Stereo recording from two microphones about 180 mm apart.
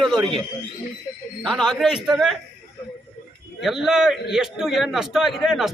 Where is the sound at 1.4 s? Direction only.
Centre (ahead or behind).